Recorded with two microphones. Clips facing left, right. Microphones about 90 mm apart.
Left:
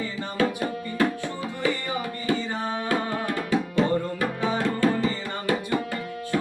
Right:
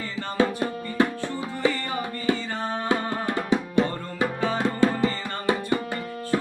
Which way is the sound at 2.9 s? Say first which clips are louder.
Right 1 dB; 25° right (ahead or behind).